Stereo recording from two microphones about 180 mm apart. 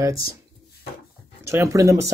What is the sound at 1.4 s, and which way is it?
Speech, 15° right (ahead or behind).